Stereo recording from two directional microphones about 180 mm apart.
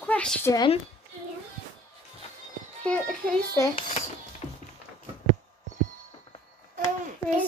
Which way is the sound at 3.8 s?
35° left (ahead or behind).